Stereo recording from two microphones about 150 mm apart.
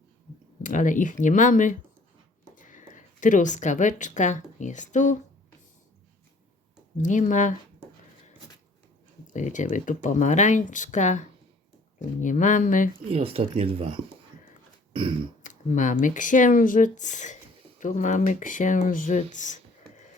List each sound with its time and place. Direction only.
0.6 s a woman's voice: 60° left (ahead or behind)
6.9 s speech: 55° left (ahead or behind)
9.3 s speech: 55° left (ahead or behind)
12.2 s speech: 55° left (ahead or behind)
13.1 s speech: 40° right (ahead or behind)
15.4 s speech: 55° left (ahead or behind)